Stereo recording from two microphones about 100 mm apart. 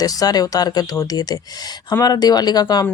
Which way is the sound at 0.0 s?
40° left (ahead or behind).